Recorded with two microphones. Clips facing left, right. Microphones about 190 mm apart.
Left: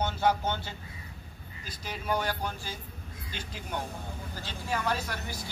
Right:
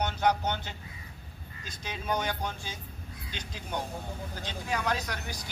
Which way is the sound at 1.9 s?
20° right (ahead or behind).